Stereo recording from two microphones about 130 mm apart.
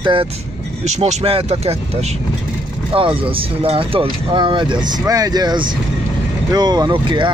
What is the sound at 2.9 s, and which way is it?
Speech, 45° right (ahead or behind).